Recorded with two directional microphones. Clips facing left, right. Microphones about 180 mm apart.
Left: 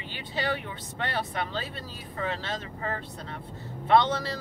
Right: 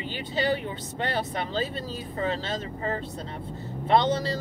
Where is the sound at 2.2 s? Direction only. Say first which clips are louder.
Right 3 dB; 30° right (ahead or behind).